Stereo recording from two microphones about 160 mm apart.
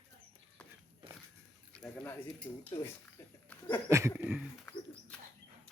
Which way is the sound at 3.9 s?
15° right (ahead or behind).